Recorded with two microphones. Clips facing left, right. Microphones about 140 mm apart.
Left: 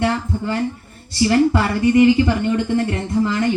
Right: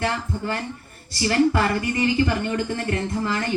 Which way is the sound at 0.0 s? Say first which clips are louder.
Left 5 dB; 20° left (ahead or behind).